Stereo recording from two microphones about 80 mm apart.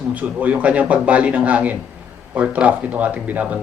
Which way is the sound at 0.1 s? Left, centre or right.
Centre.